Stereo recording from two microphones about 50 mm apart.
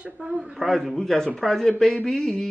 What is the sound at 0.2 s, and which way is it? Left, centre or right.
Speech, right.